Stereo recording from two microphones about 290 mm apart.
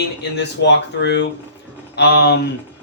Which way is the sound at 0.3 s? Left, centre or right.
Left.